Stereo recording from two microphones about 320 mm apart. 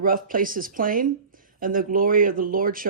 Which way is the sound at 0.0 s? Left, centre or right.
Right.